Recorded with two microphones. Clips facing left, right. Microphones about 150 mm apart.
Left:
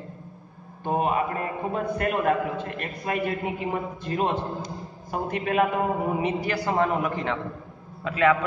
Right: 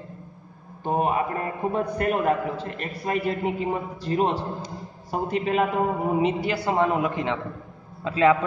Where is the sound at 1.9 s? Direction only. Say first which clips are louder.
Left 1 dB; 35° right (ahead or behind).